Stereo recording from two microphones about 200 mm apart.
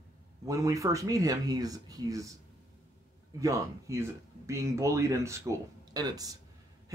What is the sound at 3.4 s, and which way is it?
Speech, 15° right (ahead or behind).